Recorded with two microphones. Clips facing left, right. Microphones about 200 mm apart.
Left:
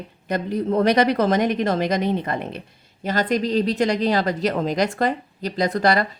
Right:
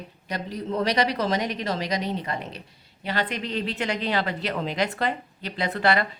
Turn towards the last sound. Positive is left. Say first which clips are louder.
# left 4 dB
turn(degrees=40)  # may be behind; listen again after turning